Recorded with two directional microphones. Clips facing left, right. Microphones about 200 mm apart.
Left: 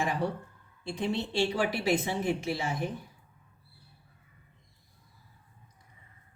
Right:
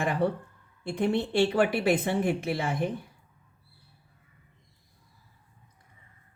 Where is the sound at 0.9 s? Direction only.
55° right (ahead or behind).